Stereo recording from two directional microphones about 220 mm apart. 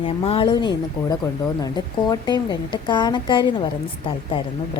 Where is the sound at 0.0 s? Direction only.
25° left (ahead or behind).